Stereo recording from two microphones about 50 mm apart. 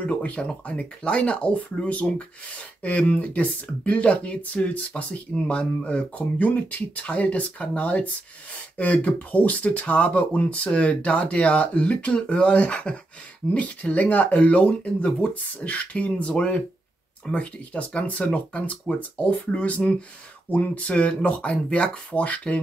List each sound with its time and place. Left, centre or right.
0.0 s speech: left